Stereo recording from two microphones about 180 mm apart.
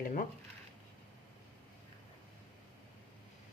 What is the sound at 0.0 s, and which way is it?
Speech, 50° left (ahead or behind).